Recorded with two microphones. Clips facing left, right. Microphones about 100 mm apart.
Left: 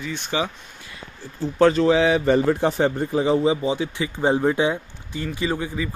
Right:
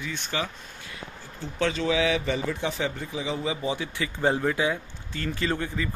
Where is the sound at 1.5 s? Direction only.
40° left (ahead or behind).